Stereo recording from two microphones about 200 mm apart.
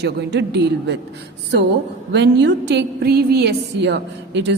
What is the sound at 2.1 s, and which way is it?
A woman's voice, 60° right (ahead or behind).